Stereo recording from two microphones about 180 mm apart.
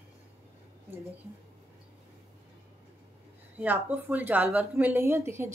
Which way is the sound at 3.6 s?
10° right (ahead or behind).